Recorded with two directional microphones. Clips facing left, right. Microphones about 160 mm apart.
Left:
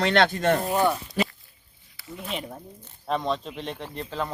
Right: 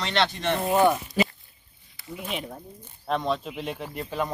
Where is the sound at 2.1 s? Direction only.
5° right (ahead or behind).